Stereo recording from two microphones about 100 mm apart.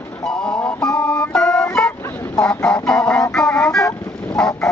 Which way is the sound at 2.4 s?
10° left (ahead or behind).